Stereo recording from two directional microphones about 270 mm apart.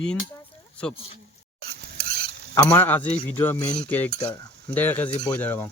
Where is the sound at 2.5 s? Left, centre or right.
Centre.